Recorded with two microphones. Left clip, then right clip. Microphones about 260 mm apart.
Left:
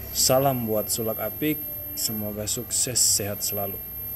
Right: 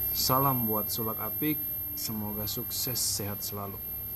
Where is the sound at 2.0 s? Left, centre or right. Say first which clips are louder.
Left 7 dB; right.